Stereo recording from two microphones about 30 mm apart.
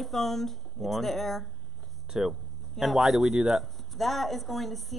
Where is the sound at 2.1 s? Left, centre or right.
Centre.